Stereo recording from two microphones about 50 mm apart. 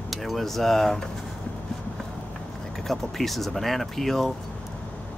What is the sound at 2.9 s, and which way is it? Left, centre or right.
Speech, centre.